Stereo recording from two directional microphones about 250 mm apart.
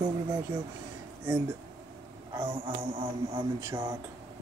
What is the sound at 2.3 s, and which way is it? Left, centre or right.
Speech, centre.